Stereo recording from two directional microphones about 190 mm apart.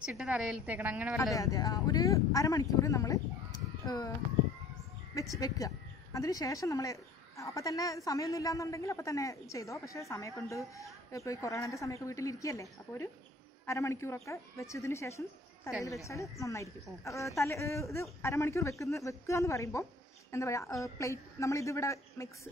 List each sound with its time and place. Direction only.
0.0 s a woman's voice: 5° right (ahead or behind)
1.3 s a woman's voice: 20° left (ahead or behind)
5.1 s a woman's voice: 15° left (ahead or behind)